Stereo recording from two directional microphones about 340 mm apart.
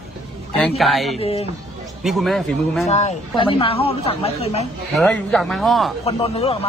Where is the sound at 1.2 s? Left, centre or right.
Centre.